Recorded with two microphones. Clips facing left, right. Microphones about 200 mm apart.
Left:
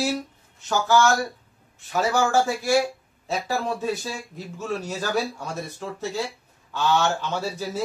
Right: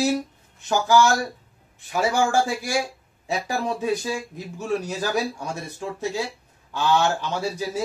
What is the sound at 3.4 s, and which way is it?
Speech, 15° right (ahead or behind).